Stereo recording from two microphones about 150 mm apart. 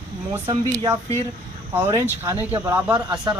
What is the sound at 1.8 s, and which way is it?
Speech, 25° right (ahead or behind).